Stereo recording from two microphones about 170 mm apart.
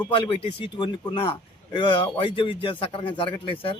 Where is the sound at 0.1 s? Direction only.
30° left (ahead or behind).